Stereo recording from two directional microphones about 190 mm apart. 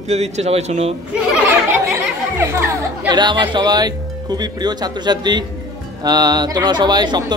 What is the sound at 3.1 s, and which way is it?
Speech, 25° right (ahead or behind).